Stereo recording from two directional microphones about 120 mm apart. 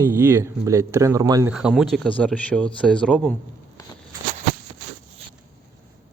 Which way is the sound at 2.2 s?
10° left (ahead or behind).